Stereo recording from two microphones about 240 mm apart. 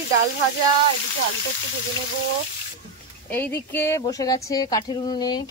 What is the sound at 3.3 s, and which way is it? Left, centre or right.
Speech, centre.